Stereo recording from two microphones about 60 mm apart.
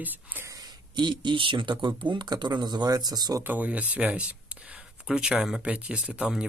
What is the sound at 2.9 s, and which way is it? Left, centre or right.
Speech, right.